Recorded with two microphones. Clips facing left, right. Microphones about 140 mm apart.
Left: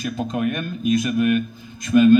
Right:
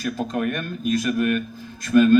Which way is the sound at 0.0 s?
5° left (ahead or behind).